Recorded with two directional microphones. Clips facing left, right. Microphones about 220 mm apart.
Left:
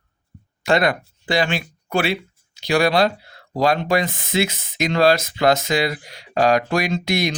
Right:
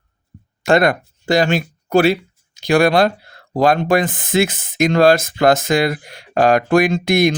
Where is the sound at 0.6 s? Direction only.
50° right (ahead or behind).